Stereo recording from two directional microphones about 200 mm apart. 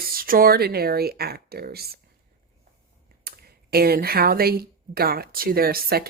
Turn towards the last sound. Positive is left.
turn(degrees=-50)  # may be behind; listen again after turning